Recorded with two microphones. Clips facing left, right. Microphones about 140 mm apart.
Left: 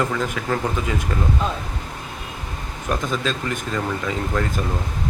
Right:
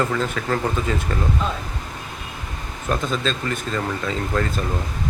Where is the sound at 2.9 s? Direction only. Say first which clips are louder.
Even; 10° left (ahead or behind).